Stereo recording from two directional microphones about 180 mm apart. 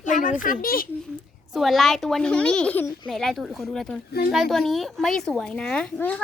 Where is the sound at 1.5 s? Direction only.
Centre (ahead or behind).